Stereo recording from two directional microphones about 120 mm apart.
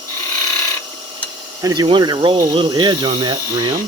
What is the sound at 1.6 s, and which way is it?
Speech, 35° right (ahead or behind).